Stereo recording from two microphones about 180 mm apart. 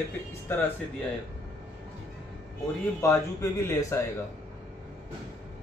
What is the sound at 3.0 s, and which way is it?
Speech, 15° left (ahead or behind).